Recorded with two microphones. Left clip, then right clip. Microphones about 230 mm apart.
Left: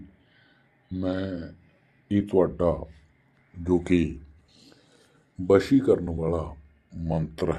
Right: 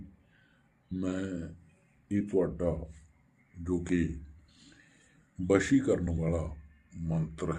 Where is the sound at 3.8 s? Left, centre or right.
Left.